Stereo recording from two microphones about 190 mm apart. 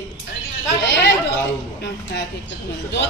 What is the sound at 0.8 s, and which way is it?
Speech, 70° left (ahead or behind).